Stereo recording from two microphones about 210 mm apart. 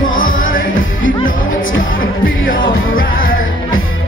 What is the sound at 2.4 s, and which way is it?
Music, 40° left (ahead or behind).